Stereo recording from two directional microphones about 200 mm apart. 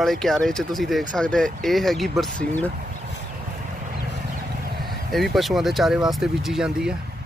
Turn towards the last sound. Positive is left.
turn(degrees=-5)  # may be behind; listen again after turning